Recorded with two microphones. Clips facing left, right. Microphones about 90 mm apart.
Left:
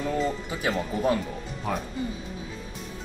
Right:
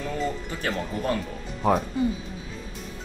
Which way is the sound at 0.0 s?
10° left (ahead or behind).